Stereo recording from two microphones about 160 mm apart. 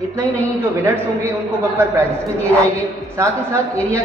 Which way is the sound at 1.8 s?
20° right (ahead or behind).